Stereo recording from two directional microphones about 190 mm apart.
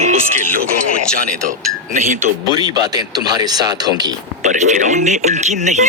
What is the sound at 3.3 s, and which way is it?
Speech, 20° right (ahead or behind).